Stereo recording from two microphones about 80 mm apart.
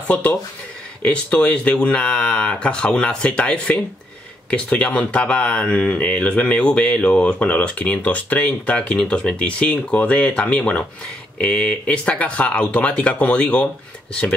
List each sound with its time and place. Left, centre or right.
0.1 s speech: centre